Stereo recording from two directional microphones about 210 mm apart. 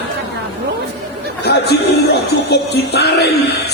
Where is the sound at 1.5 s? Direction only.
50° left (ahead or behind).